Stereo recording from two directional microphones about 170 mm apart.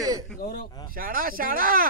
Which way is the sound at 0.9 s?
55° right (ahead or behind).